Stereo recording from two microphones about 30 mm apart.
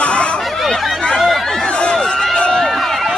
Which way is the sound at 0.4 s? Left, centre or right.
Centre.